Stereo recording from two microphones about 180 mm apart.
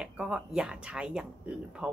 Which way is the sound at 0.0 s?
5° right (ahead or behind).